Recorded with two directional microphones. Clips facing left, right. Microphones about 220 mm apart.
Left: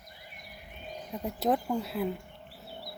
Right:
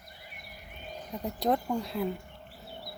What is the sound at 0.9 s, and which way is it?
Speech, centre (ahead or behind).